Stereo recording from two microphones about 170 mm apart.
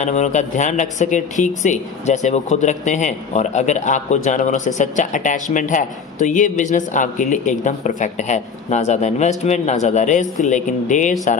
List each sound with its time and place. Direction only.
0.0 s speech: 45° left (ahead or behind)